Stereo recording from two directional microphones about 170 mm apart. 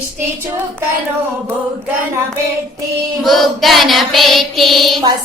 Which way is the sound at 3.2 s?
Centre (ahead or behind).